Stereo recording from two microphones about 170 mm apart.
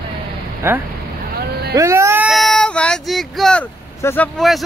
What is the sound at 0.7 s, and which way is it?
Speech, 10° right (ahead or behind).